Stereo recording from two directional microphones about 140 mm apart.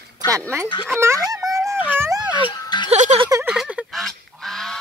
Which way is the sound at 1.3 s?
25° right (ahead or behind).